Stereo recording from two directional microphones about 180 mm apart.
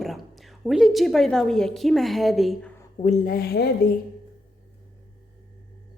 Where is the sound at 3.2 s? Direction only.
55° left (ahead or behind).